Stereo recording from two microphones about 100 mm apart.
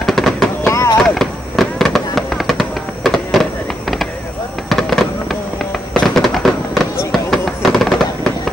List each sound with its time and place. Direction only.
0.0 s fireworks: 5° left (ahead or behind)
0.6 s a sound: 30° left (ahead or behind)
1.0 s fireworks: 5° left (ahead or behind)
4.6 s fireworks: 5° left (ahead or behind)